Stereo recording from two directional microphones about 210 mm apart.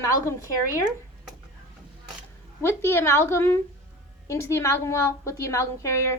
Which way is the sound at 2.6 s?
10° left (ahead or behind).